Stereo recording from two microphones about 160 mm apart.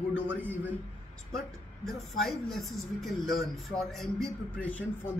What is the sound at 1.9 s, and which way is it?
Speech, centre (ahead or behind).